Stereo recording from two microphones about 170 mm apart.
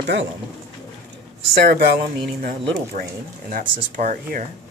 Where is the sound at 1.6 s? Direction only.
70° right (ahead or behind).